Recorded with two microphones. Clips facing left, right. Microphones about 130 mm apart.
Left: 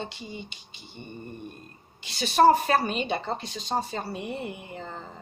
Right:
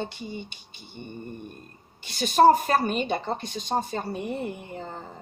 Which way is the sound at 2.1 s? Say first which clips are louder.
Right 1 dB; 45° right (ahead or behind).